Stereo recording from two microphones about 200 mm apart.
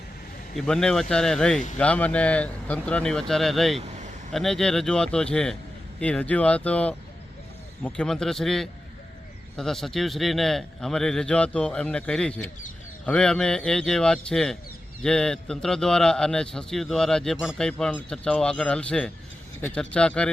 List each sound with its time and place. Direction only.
0.5 s a man's voice: centre (ahead or behind)
3.8 s vehicle: 35° right (ahead or behind)
4.3 s a man's voice: centre (ahead or behind)